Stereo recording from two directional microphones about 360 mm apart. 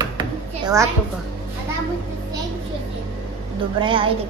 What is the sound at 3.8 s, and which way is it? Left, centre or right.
Speech, centre.